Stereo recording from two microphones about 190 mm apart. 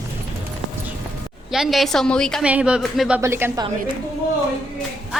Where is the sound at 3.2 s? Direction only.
15° right (ahead or behind).